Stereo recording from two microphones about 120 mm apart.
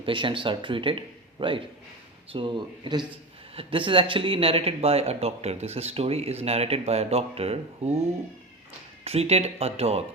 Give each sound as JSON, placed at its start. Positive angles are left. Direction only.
{"t": 0.0, "sound": "a man's voice", "side_deg": -45}
{"t": 9.0, "sound": "speech", "side_deg": -60}